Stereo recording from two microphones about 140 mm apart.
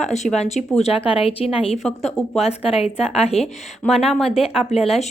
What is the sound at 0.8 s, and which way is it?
A woman's voice, 40° left (ahead or behind).